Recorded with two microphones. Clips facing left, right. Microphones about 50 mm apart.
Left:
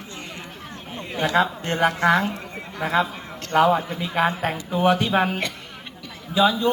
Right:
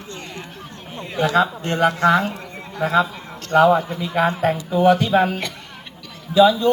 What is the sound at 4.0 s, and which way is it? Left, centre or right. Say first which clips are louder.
A man's voice: right 3 dB; centre.